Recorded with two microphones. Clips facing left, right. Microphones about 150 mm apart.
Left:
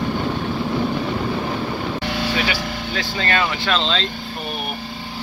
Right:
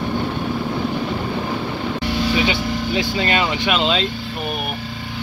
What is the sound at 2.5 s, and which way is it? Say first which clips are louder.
Speech: right 4 dB; 20° right (ahead or behind).